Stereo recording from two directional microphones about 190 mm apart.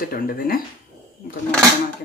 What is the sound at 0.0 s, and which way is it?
Speech, 50° left (ahead or behind).